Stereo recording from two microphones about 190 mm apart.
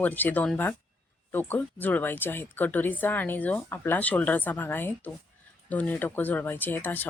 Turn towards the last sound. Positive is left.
turn(degrees=10)  # may be behind; listen again after turning